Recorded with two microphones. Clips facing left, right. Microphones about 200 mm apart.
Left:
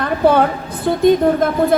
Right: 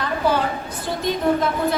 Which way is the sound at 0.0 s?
60° left (ahead or behind).